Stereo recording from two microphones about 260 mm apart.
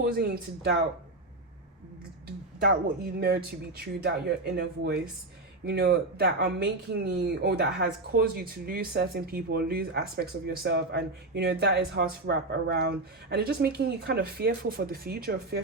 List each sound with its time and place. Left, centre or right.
0.0 s speech: right
2.6 s speech: right